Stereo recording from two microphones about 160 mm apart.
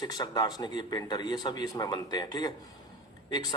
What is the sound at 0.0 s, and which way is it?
A man's voice, 25° left (ahead or behind).